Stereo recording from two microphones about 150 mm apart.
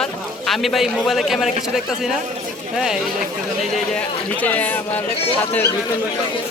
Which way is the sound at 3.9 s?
10° left (ahead or behind).